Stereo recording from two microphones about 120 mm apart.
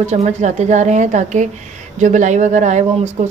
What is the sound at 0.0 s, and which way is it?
A woman's voice, 65° right (ahead or behind).